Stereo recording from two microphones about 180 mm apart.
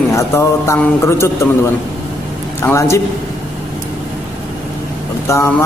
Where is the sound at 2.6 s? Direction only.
15° left (ahead or behind).